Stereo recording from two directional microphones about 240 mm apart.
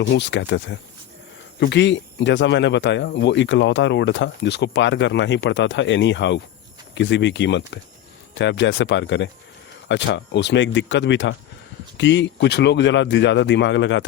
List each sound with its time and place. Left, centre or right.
0.1 s speech: left